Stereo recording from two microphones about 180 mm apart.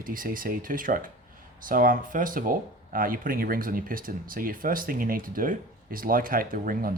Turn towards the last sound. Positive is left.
turn(degrees=-50)  # may be behind; listen again after turning